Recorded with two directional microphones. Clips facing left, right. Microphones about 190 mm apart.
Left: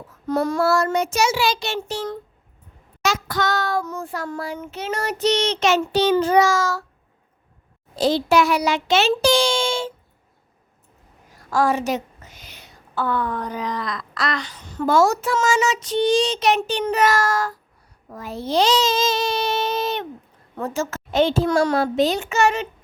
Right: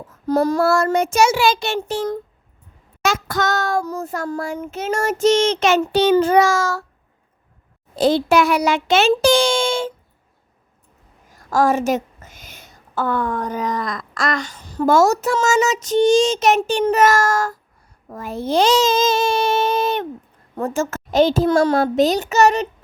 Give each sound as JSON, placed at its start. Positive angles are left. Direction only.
{"t": 0.3, "sound": "a child's voice", "side_deg": -35}
{"t": 0.6, "sound": "a woman's voice", "side_deg": -50}
{"t": 7.9, "sound": "a woman's voice", "side_deg": -55}
{"t": 11.3, "sound": "a woman's voice", "side_deg": -45}